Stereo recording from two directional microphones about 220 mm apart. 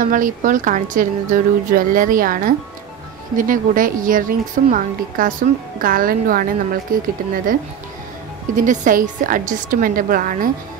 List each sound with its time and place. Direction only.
0.0 s a woman's voice: 35° right (ahead or behind)
8.5 s a woman's voice: 35° right (ahead or behind)